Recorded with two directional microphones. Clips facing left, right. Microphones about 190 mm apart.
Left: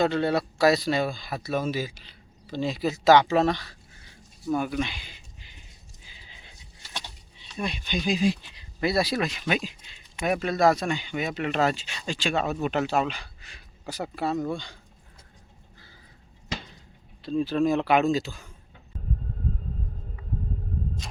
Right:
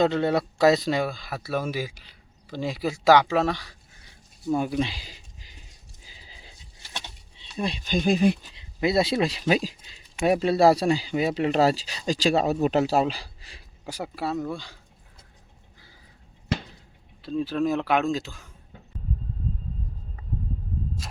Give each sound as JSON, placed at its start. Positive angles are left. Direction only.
{"t": 0.0, "sound": "speech", "side_deg": -20}
{"t": 1.1, "sound": "speech", "side_deg": -5}
{"t": 4.4, "sound": "speech", "side_deg": -25}
{"t": 6.2, "sound": "a sound", "side_deg": -35}
{"t": 7.9, "sound": "speech", "side_deg": -55}
{"t": 8.5, "sound": "speech", "side_deg": -20}
{"t": 13.8, "sound": "speech", "side_deg": -10}
{"t": 17.2, "sound": "speech", "side_deg": 0}
{"t": 21.0, "sound": "a sound", "side_deg": -5}